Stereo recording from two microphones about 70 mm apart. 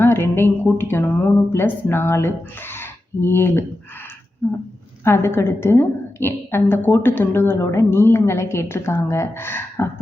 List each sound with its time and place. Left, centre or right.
0.0 s speech: left
5.0 s speech: left